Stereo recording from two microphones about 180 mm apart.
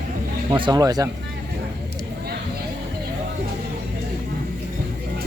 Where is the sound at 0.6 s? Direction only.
20° right (ahead or behind).